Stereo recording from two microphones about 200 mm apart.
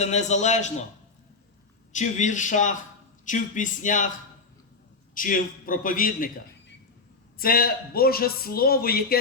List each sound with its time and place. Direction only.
0.0 s speech: 35° left (ahead or behind)
1.9 s speech: 35° left (ahead or behind)
5.1 s a man's voice: 45° left (ahead or behind)
7.3 s a man's voice: 50° left (ahead or behind)